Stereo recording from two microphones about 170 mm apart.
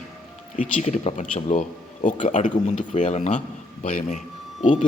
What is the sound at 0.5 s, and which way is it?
Speech, 45° left (ahead or behind).